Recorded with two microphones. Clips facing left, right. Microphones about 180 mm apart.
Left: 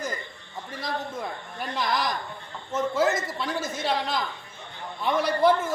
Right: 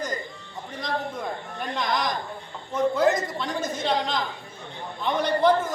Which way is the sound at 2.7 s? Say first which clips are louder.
Right 3 dB; 5° left (ahead or behind).